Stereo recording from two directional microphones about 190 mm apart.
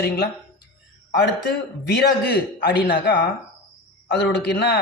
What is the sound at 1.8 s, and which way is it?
Speech, 60° left (ahead or behind).